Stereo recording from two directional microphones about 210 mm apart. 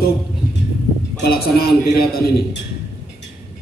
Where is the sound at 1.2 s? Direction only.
45° left (ahead or behind).